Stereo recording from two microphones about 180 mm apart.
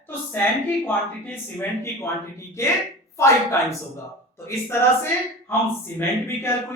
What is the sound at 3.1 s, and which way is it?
Speech, 15° left (ahead or behind).